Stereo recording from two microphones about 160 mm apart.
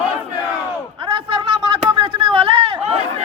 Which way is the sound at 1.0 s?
30° right (ahead or behind).